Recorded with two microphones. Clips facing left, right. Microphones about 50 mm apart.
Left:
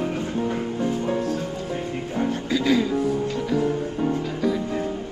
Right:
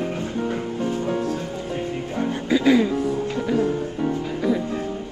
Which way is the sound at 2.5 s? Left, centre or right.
Centre.